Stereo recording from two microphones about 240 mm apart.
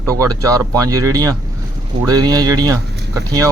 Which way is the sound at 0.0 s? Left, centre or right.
Centre.